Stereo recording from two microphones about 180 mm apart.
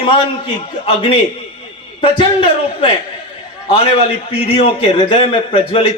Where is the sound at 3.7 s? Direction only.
30° left (ahead or behind).